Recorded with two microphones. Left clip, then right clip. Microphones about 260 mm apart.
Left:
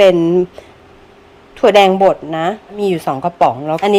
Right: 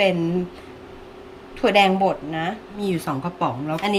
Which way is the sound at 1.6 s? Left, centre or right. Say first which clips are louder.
Left 9 dB; centre.